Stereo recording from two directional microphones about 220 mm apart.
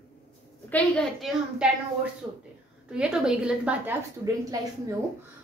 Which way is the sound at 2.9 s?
5° right (ahead or behind).